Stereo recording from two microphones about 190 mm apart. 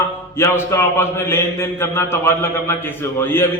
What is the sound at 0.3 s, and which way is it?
A man's voice, 15° left (ahead or behind).